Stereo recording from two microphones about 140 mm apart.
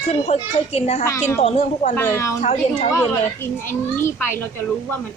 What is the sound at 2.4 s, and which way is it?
Speech, 55° left (ahead or behind).